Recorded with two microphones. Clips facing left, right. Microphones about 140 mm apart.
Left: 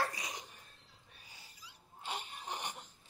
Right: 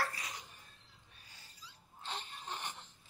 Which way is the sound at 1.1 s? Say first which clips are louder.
Left 3 dB; 10° left (ahead or behind).